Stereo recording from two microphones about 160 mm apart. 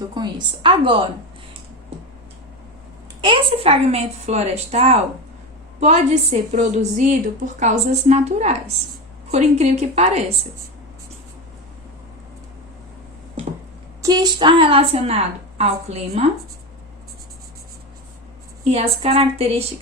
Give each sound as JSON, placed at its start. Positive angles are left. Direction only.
{"t": 0.1, "sound": "a woman's voice", "side_deg": -30}
{"t": 3.2, "sound": "a woman's voice", "side_deg": -35}
{"t": 13.4, "sound": "a sound", "side_deg": -35}
{"t": 14.0, "sound": "a woman's voice", "side_deg": -25}
{"t": 18.7, "sound": "a woman's voice", "side_deg": -40}